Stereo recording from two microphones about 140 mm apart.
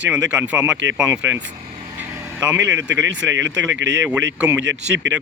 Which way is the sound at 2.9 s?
10° right (ahead or behind).